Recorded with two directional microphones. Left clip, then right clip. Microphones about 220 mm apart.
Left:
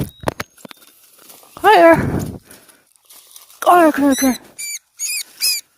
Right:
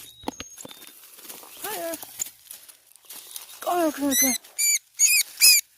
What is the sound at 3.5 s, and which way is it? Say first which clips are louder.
Rodents: left 14 dB; 45° left (ahead or behind).